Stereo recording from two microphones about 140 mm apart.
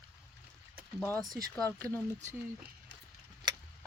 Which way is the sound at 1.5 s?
10° left (ahead or behind).